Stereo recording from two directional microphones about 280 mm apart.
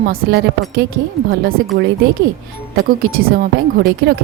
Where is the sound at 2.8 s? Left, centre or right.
Right.